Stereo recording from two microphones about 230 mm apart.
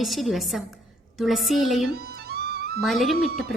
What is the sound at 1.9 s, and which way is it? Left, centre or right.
Music, right.